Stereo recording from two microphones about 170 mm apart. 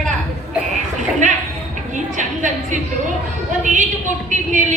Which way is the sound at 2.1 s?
45° right (ahead or behind).